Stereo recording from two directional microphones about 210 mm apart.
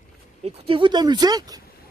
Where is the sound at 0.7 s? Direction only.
20° right (ahead or behind).